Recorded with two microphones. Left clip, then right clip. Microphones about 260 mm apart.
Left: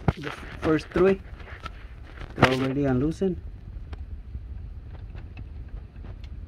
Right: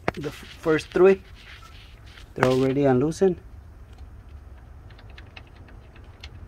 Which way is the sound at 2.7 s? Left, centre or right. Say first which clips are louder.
Right 5 dB; centre.